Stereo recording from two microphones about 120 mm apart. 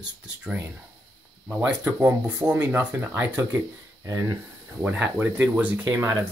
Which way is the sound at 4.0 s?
25° right (ahead or behind).